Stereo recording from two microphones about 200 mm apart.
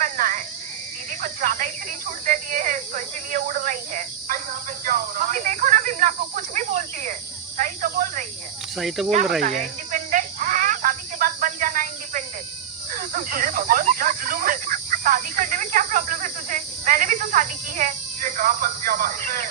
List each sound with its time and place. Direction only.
0.0 s frog: 40° right (ahead or behind)
1.2 s speech: 40° right (ahead or behind)
4.9 s snake: 45° right (ahead or behind)
8.7 s speech: centre (ahead or behind)
9.4 s a sound: 40° right (ahead or behind)
12.9 s snake: 45° right (ahead or behind)